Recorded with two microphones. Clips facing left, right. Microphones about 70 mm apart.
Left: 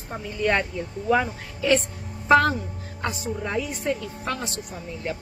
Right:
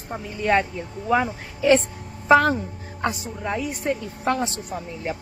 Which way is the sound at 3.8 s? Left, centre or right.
Right.